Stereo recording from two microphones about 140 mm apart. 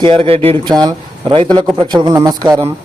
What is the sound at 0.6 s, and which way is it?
A man's voice, 30° right (ahead or behind).